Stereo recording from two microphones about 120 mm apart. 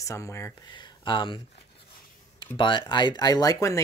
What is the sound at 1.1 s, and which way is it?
Speech, 45° left (ahead or behind).